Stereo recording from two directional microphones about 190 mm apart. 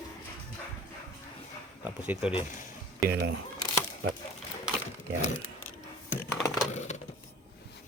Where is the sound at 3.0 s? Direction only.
55° right (ahead or behind).